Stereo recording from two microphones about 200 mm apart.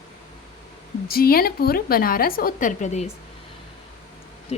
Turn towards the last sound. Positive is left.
turn(degrees=30)  # may be behind; listen again after turning